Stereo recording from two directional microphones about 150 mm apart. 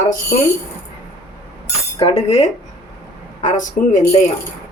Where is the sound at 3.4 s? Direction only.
55° left (ahead or behind).